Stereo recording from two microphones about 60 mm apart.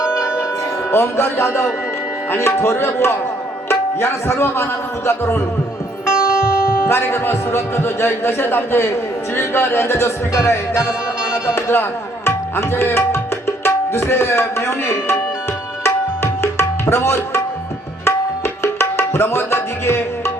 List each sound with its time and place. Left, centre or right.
0.0 s music: centre
0.9 s a man's voice: left
6.1 s music: centre
6.8 s a man's voice: left
13.7 s tabla: left